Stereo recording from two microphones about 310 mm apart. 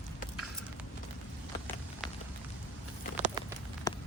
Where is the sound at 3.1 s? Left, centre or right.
Right.